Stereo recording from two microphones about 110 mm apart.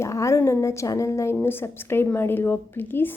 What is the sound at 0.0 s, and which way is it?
A woman's voice, 30° left (ahead or behind).